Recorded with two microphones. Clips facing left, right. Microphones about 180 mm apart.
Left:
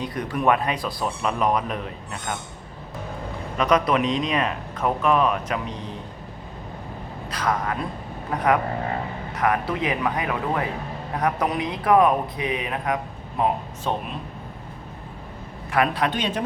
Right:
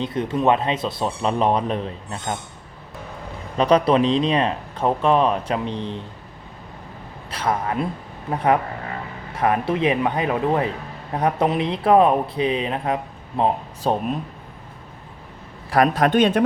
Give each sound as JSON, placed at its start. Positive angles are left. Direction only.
{"t": 0.0, "sound": "speech", "side_deg": -25}
{"t": 3.6, "sound": "speech", "side_deg": -30}
{"t": 7.3, "sound": "speech", "side_deg": -25}
{"t": 15.7, "sound": "a man's voice", "side_deg": -40}